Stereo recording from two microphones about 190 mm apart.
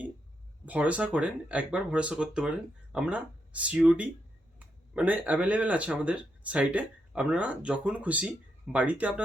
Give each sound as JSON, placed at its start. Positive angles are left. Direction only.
{"t": 0.6, "sound": "speech", "side_deg": -5}